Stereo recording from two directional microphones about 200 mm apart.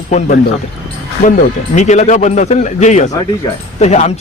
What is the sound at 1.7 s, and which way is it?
Speech, 35° left (ahead or behind).